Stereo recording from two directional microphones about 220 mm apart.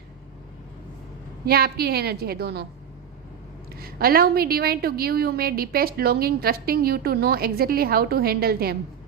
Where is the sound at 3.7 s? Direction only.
45° right (ahead or behind).